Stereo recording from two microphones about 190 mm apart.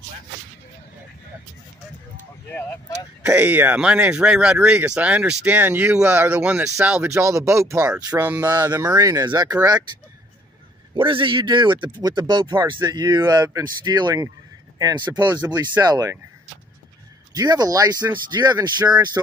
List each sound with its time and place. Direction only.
2.5 s speech: 15° left (ahead or behind)
3.2 s speech: 10° right (ahead or behind)
11.0 s speech: 25° right (ahead or behind)
17.3 s speech: 20° right (ahead or behind)